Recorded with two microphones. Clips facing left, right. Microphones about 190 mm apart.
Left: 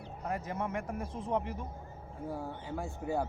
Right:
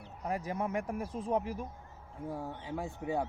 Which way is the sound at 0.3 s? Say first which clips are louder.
Right 1 dB; 15° right (ahead or behind).